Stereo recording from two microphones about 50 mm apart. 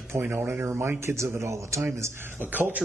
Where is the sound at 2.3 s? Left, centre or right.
Right.